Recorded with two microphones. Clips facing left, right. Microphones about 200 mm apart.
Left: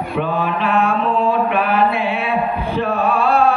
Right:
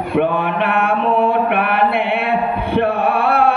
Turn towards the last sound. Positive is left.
turn(degrees=-55)  # may be behind; listen again after turning